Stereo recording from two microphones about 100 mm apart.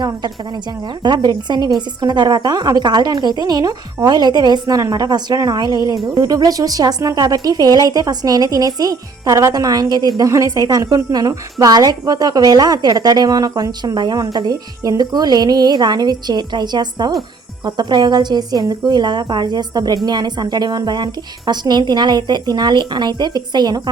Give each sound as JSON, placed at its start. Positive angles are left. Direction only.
{"t": 1.0, "sound": "a woman's voice", "side_deg": -45}